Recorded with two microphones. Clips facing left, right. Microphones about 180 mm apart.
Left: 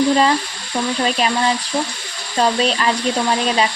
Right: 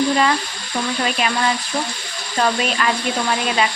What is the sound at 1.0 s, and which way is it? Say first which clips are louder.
Speech: left 2 dB; 30° left (ahead or behind).